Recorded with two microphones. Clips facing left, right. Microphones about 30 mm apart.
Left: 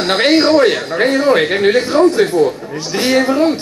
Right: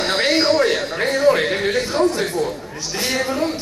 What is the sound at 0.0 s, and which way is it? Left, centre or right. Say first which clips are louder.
A man's voice: left 6 dB; left.